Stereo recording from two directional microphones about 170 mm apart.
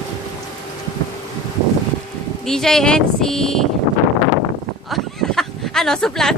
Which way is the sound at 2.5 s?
5° left (ahead or behind).